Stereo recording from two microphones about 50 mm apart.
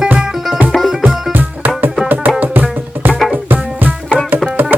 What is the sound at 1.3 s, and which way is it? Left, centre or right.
Music, right.